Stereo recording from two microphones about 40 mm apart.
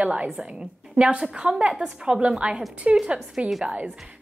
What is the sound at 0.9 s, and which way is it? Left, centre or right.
A woman's voice, right.